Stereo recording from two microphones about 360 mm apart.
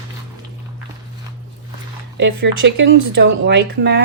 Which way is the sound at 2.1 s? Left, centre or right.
Right.